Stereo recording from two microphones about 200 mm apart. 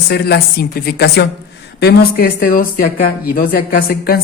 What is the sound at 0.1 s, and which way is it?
A woman's voice, 55° left (ahead or behind).